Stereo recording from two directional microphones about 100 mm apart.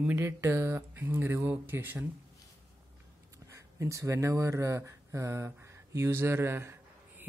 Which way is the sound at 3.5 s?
30° right (ahead or behind).